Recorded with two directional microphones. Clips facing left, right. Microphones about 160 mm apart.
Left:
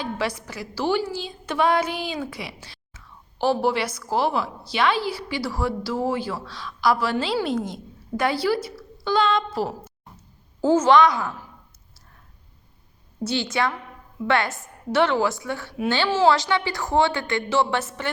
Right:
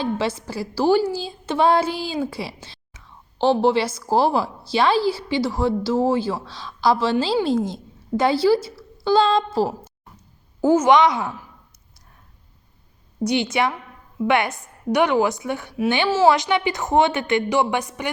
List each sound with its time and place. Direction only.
0.0 s a woman's voice: 25° right (ahead or behind)
10.6 s a woman's voice: 10° right (ahead or behind)
13.2 s a woman's voice: 20° right (ahead or behind)
16.0 s a woman's voice: 5° right (ahead or behind)
16.3 s a woman's voice: 20° right (ahead or behind)